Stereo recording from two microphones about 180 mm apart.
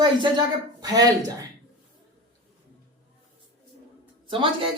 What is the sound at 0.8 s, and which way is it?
Speech, 20° right (ahead or behind).